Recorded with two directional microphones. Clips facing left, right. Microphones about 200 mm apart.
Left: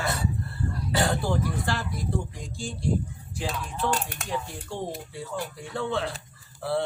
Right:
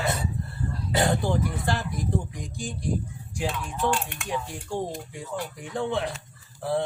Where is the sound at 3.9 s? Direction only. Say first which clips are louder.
Right 1 dB; 40° left (ahead or behind).